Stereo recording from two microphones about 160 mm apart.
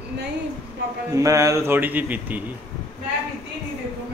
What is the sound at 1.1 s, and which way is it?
A man's voice, 20° right (ahead or behind).